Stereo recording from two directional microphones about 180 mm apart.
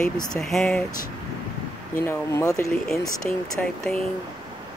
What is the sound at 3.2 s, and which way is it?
Speech, 5° left (ahead or behind).